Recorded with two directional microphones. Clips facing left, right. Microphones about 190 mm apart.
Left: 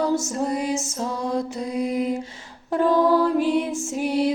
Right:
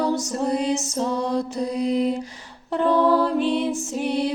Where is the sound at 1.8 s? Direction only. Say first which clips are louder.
Right 2 dB; 35° right (ahead or behind).